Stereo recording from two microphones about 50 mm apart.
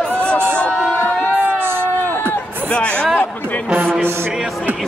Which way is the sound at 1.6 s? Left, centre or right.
Right.